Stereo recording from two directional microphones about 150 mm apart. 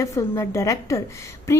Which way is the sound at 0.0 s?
20° left (ahead or behind).